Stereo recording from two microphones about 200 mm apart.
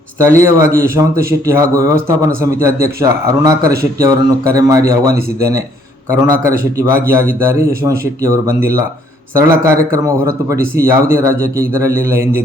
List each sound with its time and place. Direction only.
0.3 s a man's voice: 15° right (ahead or behind)